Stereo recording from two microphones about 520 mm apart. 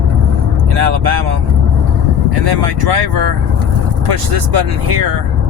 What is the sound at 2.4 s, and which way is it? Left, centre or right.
Speech, right.